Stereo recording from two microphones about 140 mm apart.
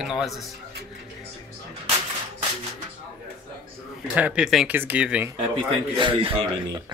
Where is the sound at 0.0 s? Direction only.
Centre (ahead or behind).